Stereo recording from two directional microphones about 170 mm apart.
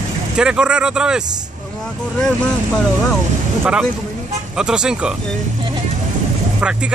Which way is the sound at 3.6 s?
5° right (ahead or behind).